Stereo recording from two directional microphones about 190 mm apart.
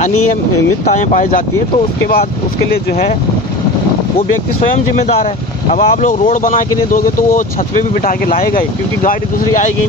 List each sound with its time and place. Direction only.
5.8 s speech: 40° left (ahead or behind)